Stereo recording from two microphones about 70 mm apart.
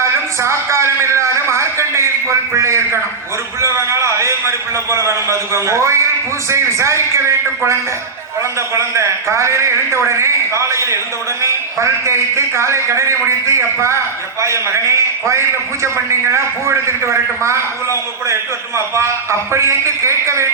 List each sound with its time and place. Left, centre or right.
0.0 s a sound: right
3.6 s a man's voice: right
18.9 s a man's voice: right